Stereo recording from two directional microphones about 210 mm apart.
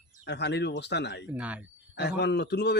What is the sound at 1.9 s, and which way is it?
Speech, 55° left (ahead or behind).